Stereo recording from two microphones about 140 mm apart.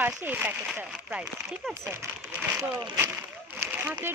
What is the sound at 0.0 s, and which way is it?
Speech, 10° right (ahead or behind).